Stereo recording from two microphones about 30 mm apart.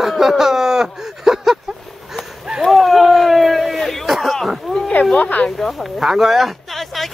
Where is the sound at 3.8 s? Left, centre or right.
Centre.